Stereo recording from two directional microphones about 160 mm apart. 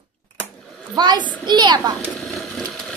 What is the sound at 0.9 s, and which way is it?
Speech, 30° right (ahead or behind).